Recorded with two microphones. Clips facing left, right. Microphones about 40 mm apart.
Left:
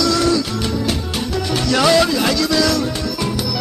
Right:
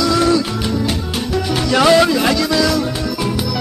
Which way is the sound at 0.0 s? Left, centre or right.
Centre.